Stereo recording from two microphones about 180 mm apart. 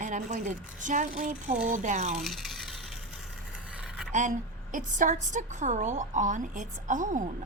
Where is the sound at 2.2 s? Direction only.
Centre (ahead or behind).